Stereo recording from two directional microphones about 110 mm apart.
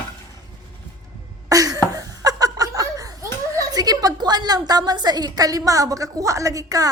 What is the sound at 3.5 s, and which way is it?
A woman's voice, 35° right (ahead or behind).